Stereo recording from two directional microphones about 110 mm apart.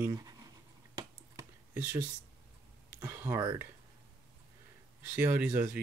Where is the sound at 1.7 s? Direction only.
15° right (ahead or behind).